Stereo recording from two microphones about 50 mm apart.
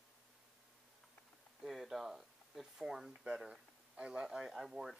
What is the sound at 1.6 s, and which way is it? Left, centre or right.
Speech, centre.